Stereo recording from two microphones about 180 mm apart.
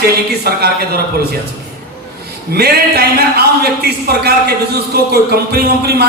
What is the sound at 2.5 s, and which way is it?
Speech, 60° right (ahead or behind).